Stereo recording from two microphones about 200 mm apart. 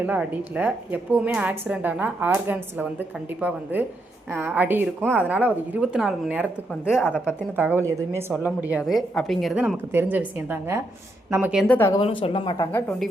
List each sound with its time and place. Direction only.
0.0 s a woman's voice: 5° right (ahead or behind)
7.0 s speech: 10° left (ahead or behind)
7.5 s a woman's voice: 10° right (ahead or behind)
11.6 s speech: 10° left (ahead or behind)
11.9 s speech: 25° left (ahead or behind)
12.7 s speech: 10° left (ahead or behind)